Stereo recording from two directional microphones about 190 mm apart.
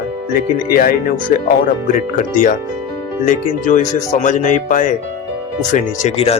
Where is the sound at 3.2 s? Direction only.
45° left (ahead or behind).